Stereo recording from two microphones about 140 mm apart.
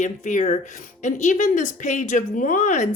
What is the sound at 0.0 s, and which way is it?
A woman's voice, 60° left (ahead or behind).